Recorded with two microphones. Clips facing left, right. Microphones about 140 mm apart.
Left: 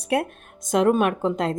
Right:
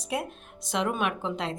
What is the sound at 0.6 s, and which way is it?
Speech, 45° left (ahead or behind).